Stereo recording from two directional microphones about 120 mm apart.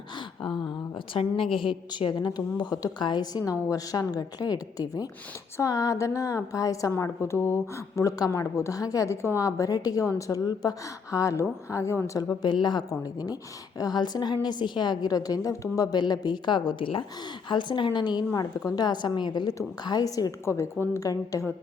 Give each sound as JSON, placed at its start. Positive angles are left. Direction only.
{"t": 0.9, "sound": "a woman's voice", "side_deg": 50}
{"t": 12.4, "sound": "a woman's voice", "side_deg": 35}